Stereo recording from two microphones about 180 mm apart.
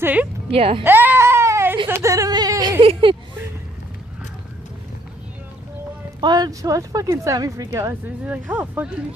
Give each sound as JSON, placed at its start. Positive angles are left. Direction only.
{"t": 0.0, "sound": "a woman's voice", "side_deg": -10}
{"t": 0.5, "sound": "speech", "side_deg": -30}
{"t": 0.8, "sound": "baby cry", "side_deg": -10}
{"t": 1.9, "sound": "a sound", "side_deg": -15}
{"t": 2.8, "sound": "speech", "side_deg": -30}
{"t": 6.2, "sound": "speech", "side_deg": -20}